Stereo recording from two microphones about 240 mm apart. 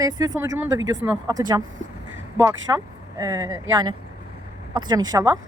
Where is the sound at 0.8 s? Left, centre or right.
Right.